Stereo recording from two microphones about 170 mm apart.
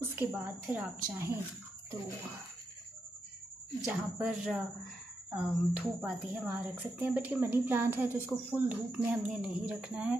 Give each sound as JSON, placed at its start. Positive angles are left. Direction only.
{"t": 0.0, "sound": "speech", "side_deg": -10}
{"t": 3.8, "sound": "speech", "side_deg": -5}